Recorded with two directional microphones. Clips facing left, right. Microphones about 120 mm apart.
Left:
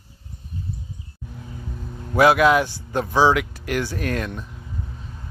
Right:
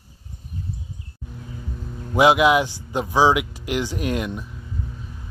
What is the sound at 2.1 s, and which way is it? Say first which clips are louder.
Speech: even; 15° right (ahead or behind).